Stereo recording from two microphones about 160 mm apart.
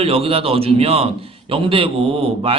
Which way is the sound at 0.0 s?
35° right (ahead or behind).